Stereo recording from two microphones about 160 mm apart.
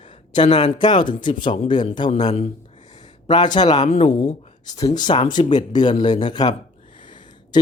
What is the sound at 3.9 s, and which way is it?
Speech, 40° left (ahead or behind).